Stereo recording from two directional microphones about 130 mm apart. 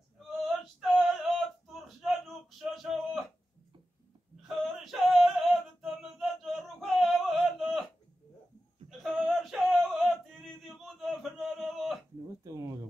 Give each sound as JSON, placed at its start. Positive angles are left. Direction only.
{"t": 0.7, "sound": "male singing", "side_deg": 0}
{"t": 4.4, "sound": "male singing", "side_deg": 0}
{"t": 9.0, "sound": "male singing", "side_deg": 0}
{"t": 12.4, "sound": "a sound", "side_deg": -25}